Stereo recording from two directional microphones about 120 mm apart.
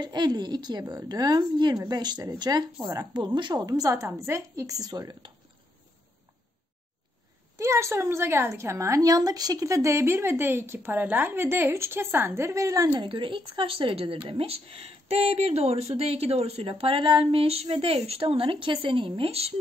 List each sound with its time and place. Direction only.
0.0 s speech: 35° right (ahead or behind)
7.5 s a woman's voice: 25° right (ahead or behind)
12.9 s speech: 45° right (ahead or behind)